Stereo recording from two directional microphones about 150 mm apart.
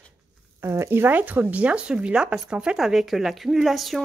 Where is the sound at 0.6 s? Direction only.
15° right (ahead or behind); by 4.0 s centre (ahead or behind).